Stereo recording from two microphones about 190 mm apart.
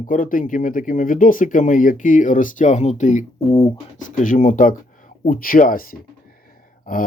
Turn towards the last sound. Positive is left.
turn(degrees=45)  # may be behind; listen again after turning